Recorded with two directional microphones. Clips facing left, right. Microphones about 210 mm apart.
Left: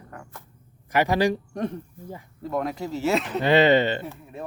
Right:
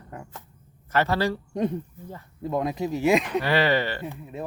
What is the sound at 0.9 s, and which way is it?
Speech, 15° left (ahead or behind).